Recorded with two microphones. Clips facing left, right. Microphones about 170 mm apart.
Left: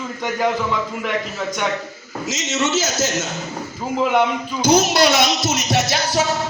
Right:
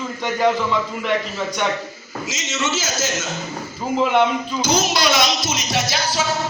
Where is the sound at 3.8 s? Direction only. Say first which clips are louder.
Right 1 dB; 5° left (ahead or behind).